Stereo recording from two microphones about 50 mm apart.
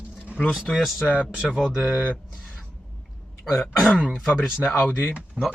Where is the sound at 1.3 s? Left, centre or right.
Centre.